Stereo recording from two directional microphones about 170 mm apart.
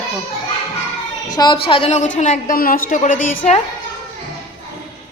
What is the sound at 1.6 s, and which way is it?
A woman's voice, 35° left (ahead or behind).